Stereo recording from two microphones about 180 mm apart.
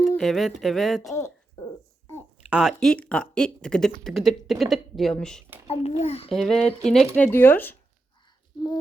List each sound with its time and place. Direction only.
0.2 s speech: centre (ahead or behind)
1.1 s a sound: 15° left (ahead or behind)
2.5 s speech: 5° right (ahead or behind)
5.6 s a child's voice: 35° left (ahead or behind)
6.3 s speech: centre (ahead or behind)